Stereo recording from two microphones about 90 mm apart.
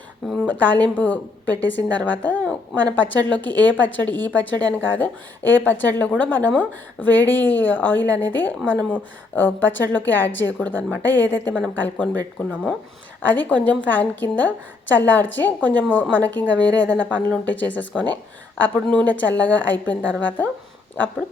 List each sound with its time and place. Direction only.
0.3 s a woman's voice: 20° left (ahead or behind)